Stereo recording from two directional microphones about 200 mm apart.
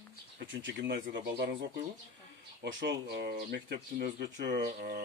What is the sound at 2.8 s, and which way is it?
Speech, 60° right (ahead or behind).